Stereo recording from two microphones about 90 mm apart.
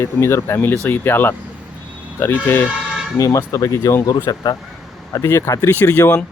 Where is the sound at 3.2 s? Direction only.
35° left (ahead or behind).